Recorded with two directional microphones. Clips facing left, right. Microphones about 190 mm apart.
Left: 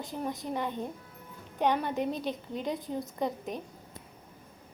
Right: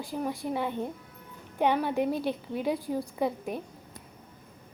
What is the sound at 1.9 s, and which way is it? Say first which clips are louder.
Speech: right 4 dB; 20° left (ahead or behind).